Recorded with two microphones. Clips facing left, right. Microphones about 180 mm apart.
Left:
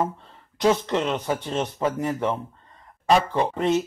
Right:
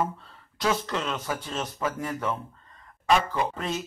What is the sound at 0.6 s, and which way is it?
Speech, 25° left (ahead or behind).